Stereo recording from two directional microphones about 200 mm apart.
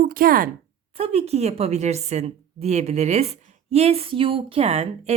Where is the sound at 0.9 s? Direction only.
30° right (ahead or behind).